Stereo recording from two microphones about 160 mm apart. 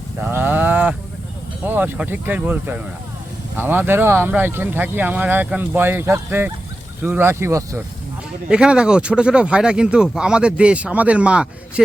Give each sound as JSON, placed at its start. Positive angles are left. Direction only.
{"t": 0.2, "sound": "livestock", "side_deg": -10}
{"t": 1.6, "sound": "speech", "side_deg": -10}
{"t": 8.4, "sound": "speech", "side_deg": -5}